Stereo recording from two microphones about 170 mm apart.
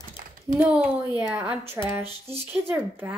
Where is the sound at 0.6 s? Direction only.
10° right (ahead or behind).